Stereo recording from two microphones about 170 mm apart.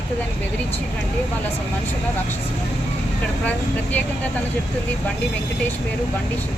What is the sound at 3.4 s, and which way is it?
Speech, 10° left (ahead or behind).